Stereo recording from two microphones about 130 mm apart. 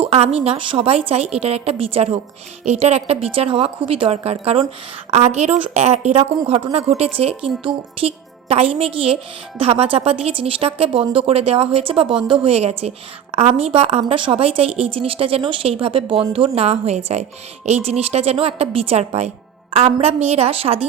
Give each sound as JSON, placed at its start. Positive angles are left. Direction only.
{"t": 0.0, "sound": "a woman's voice", "side_deg": -50}